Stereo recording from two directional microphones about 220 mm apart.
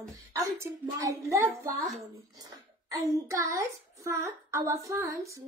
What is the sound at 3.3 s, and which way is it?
A child's voice, 15° right (ahead or behind).